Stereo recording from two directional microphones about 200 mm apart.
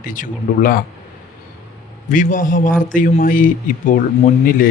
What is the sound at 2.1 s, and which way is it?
A man's voice, 40° left (ahead or behind).